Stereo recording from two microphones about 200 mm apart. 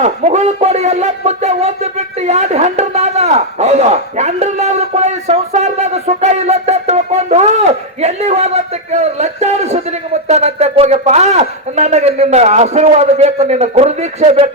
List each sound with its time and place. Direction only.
0.0 s speech: 35° right (ahead or behind)